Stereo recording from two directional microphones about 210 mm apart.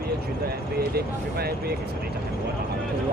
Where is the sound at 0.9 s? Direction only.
50° right (ahead or behind).